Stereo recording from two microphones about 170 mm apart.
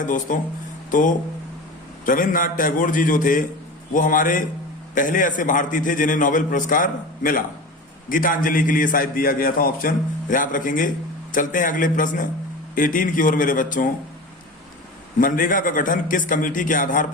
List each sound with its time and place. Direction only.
0.0 s a man's voice: 50° left (ahead or behind)
15.2 s a man's voice: 55° left (ahead or behind)